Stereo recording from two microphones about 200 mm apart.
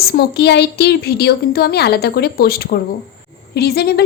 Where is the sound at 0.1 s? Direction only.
55° left (ahead or behind).